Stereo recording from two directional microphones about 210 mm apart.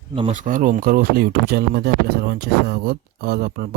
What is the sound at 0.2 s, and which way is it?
Speech, 35° right (ahead or behind).